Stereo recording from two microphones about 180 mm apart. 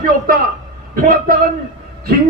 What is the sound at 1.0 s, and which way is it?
Speech, 50° right (ahead or behind).